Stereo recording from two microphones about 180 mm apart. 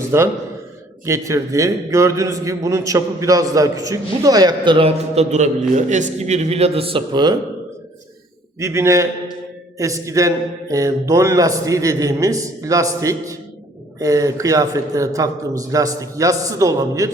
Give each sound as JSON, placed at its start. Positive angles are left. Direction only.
{"t": 0.1, "sound": "a man's voice", "side_deg": -15}
{"t": 8.5, "sound": "a man's voice", "side_deg": -15}